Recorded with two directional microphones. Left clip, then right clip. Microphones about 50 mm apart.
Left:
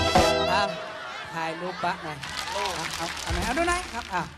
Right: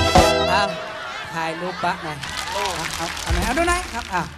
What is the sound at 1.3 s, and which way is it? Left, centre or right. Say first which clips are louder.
Speech: right 5 dB; right.